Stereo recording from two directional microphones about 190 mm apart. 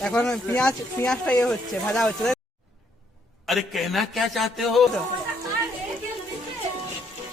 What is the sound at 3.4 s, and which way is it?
Speech, centre (ahead or behind).